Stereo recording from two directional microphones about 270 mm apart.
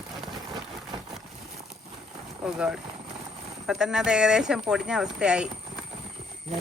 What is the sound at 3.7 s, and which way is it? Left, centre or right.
Speech, centre.